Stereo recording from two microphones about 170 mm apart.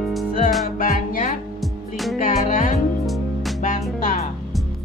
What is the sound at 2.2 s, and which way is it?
Music, 50° left (ahead or behind).